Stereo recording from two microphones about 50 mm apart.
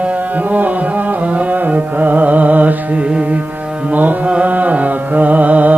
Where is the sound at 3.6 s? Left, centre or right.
Right.